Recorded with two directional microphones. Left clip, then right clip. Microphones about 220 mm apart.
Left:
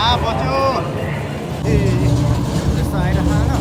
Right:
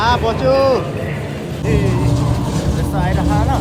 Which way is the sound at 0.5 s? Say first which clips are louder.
Right 5 dB; 50° left (ahead or behind).